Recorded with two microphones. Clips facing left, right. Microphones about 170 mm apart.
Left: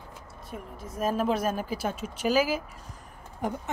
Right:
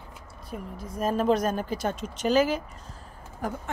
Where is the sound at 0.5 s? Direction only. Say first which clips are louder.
Right 3 dB; centre (ahead or behind).